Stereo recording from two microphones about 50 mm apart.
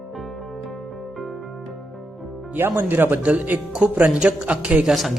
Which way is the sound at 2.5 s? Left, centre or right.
Right.